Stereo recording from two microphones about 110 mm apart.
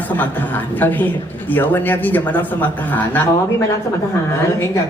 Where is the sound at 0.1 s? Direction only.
15° left (ahead or behind).